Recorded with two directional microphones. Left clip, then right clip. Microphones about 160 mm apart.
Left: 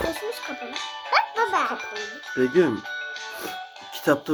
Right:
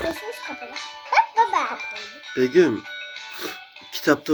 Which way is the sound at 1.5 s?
25° left (ahead or behind).